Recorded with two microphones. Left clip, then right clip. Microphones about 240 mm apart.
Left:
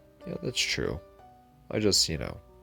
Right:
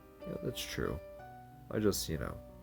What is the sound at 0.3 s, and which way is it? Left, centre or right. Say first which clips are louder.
Speech: left 10 dB; left.